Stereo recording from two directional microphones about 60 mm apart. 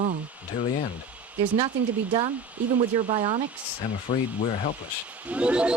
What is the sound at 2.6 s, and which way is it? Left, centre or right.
Speech, right.